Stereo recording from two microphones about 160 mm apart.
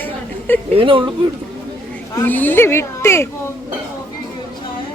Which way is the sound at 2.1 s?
10° left (ahead or behind).